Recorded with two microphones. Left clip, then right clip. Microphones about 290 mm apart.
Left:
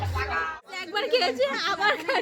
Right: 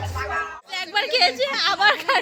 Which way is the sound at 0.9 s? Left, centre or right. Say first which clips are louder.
Right 5 dB; centre.